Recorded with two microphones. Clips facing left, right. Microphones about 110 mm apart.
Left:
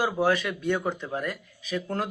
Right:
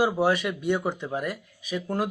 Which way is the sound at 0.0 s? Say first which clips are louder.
Right 2 dB; 15° right (ahead or behind).